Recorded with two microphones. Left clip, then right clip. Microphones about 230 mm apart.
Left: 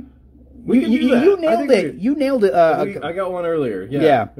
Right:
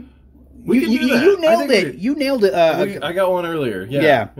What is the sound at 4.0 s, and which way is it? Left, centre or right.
Speech, centre.